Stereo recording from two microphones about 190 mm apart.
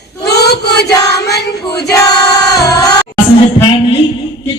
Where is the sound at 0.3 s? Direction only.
60° left (ahead or behind).